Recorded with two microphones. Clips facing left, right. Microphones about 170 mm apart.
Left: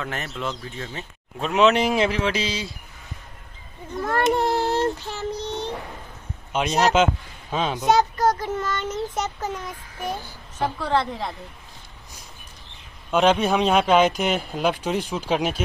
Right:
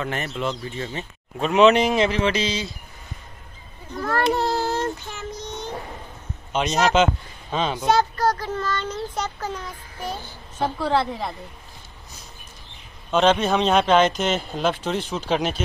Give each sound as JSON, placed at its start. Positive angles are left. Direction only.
{"t": 0.0, "sound": "speech", "side_deg": 0}
{"t": 4.0, "sound": "child singing", "side_deg": 20}
{"t": 6.5, "sound": "speech", "side_deg": 5}
{"t": 7.9, "sound": "a child's voice", "side_deg": 20}
{"t": 10.8, "sound": "a woman's voice", "side_deg": -10}
{"t": 13.1, "sound": "speech", "side_deg": 10}